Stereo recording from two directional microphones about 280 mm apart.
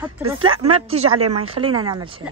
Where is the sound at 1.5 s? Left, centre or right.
Centre.